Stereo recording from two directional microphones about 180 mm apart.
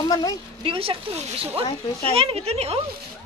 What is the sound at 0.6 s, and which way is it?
Speech, 30° right (ahead or behind).